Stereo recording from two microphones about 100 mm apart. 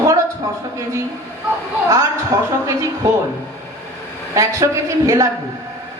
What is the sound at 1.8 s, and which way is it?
Speech, 30° right (ahead or behind).